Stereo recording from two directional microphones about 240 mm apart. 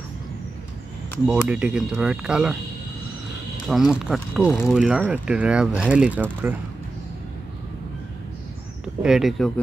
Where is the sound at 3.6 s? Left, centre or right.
Centre.